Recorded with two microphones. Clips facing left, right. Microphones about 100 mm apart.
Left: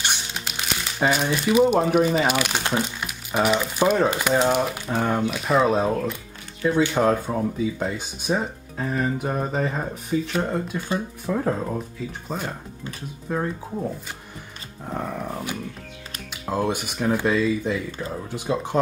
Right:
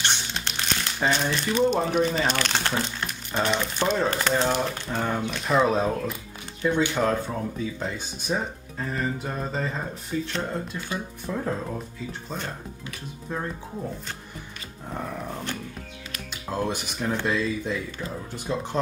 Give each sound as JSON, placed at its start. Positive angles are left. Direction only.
{"t": 0.0, "sound": "speech", "side_deg": 10}
{"t": 14.9, "sound": "speech", "side_deg": 15}